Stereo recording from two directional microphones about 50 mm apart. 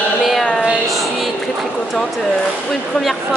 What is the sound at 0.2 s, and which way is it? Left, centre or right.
Child singing, centre.